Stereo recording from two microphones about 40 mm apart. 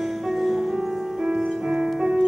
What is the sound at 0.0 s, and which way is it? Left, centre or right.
Music, centre.